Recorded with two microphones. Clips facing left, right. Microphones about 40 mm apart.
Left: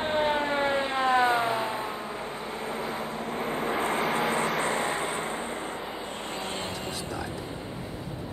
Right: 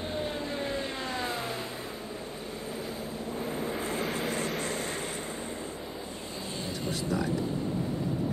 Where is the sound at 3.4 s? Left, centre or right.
Left.